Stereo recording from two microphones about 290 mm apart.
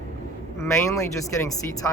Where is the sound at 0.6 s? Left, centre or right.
Centre.